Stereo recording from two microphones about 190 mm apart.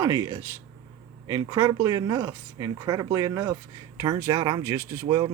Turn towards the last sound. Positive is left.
turn(degrees=-20)  # may be behind; listen again after turning